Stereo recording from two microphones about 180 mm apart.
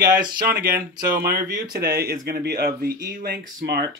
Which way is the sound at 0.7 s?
55° right (ahead or behind).